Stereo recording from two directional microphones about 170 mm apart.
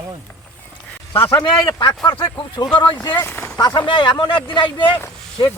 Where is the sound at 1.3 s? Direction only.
25° left (ahead or behind).